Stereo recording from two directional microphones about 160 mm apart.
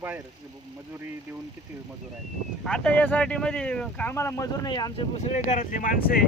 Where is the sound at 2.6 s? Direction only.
5° left (ahead or behind); by 5.0 s 25° left (ahead or behind).